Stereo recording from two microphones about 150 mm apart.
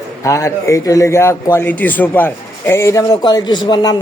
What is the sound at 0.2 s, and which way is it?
A man's voice, 20° left (ahead or behind).